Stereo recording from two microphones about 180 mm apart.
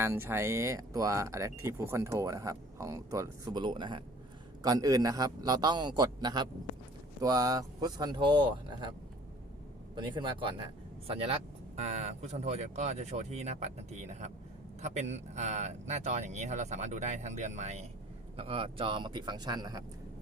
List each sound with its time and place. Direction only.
0.0 s a man's voice: 15° right (ahead or behind)